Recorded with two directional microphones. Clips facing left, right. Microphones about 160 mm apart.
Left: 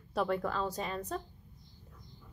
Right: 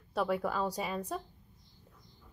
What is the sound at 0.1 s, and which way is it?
A woman's voice, 5° right (ahead or behind).